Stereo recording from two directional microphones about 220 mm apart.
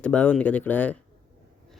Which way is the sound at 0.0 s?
5° left (ahead or behind).